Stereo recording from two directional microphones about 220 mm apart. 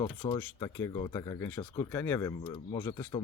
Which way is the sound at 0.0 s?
20° left (ahead or behind).